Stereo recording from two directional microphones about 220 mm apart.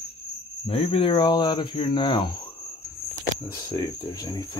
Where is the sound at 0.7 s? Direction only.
25° left (ahead or behind).